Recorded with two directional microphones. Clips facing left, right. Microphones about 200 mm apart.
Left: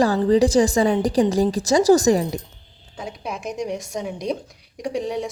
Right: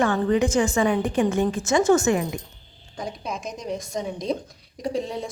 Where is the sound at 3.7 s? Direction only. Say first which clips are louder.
Left 1 dB; 10° left (ahead or behind).